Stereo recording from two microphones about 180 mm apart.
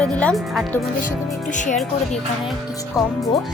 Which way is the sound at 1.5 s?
45° left (ahead or behind).